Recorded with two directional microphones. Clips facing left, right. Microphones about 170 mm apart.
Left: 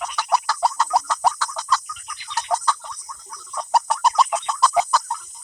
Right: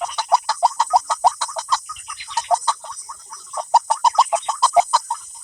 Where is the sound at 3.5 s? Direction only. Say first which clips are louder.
Right 3 dB; 25° right (ahead or behind).